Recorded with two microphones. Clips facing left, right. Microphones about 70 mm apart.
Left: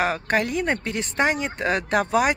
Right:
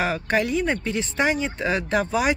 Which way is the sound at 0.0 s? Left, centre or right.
Left.